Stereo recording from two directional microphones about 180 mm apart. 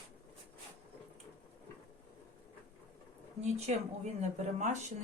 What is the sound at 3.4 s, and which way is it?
Speech, 40° right (ahead or behind).